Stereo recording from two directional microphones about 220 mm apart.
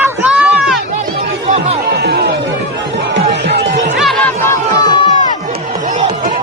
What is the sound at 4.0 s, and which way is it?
Chatter, centre (ahead or behind).